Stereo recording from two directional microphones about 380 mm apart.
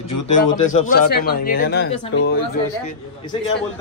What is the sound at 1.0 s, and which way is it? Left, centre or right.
Speech, left.